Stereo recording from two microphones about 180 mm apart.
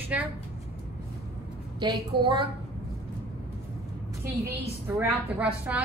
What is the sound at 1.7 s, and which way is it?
Speech, 25° right (ahead or behind).